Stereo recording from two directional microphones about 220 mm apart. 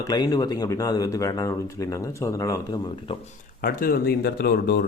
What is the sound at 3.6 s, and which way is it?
Speech, 40° left (ahead or behind).